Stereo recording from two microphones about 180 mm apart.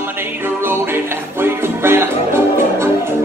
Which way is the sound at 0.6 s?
15° right (ahead or behind).